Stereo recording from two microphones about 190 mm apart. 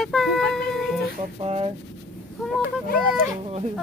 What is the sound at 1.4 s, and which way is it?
Speech, 30° right (ahead or behind).